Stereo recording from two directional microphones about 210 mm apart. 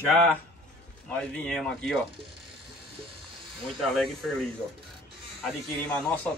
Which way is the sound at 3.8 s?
Centre (ahead or behind).